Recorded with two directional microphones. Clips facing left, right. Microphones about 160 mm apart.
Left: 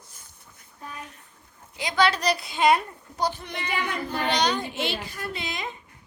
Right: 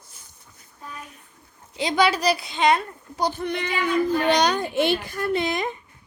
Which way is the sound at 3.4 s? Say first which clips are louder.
Right 9 dB; 60° right (ahead or behind).